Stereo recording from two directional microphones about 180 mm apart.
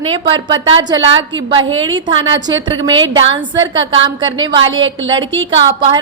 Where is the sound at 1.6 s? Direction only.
90° right.